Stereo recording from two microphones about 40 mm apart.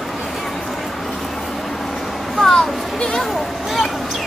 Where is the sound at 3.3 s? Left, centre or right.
Centre.